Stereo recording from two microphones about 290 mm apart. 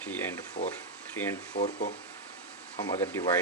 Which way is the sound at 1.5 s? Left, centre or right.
Left.